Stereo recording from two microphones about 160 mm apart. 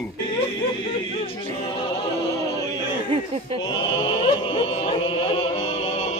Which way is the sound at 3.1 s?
40° right (ahead or behind).